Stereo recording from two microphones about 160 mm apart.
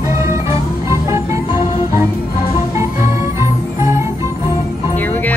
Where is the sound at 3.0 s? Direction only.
15° right (ahead or behind).